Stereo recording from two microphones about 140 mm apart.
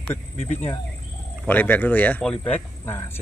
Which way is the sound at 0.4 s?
50° left (ahead or behind).